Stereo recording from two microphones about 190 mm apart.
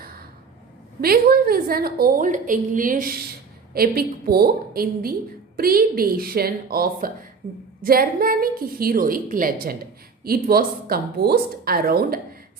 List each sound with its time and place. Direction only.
1.0 s a woman's voice: 55° right (ahead or behind)